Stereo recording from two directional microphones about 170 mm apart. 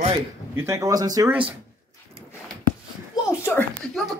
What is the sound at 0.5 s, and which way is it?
Speech, 15° right (ahead or behind).